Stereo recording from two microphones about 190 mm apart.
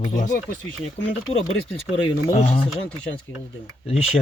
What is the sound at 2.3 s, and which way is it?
Speech, 30° left (ahead or behind).